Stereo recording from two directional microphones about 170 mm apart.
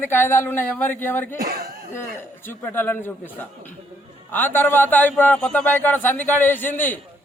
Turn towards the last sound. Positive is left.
turn(degrees=10)  # may be behind; listen again after turning